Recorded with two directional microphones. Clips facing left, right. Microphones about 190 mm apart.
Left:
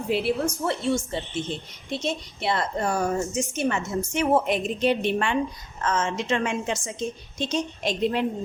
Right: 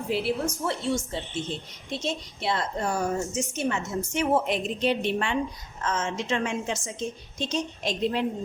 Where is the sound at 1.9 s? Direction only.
60° left (ahead or behind).